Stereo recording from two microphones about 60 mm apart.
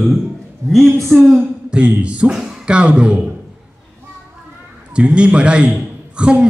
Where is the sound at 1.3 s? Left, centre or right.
Centre.